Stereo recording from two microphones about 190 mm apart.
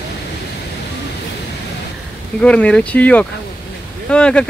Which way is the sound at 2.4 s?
5° left (ahead or behind).